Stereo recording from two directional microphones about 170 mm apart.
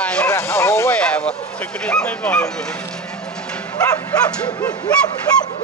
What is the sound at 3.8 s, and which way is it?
Bow-wow, 20° left (ahead or behind).